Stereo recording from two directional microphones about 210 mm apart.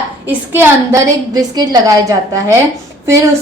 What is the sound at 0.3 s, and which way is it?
A woman's voice, 10° right (ahead or behind).